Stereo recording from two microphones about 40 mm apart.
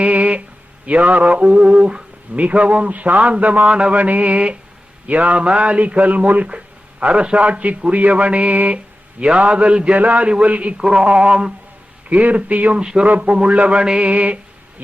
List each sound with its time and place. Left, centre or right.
0.0 s a sound: right
0.9 s speech: right
10.8 s a man's voice: centre
12.0 s speech: right
12.8 s a man's voice: centre
13.1 s a man's voice: right
14.0 s speech: right